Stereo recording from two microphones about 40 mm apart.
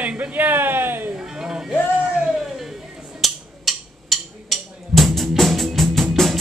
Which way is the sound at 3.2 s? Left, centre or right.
Centre.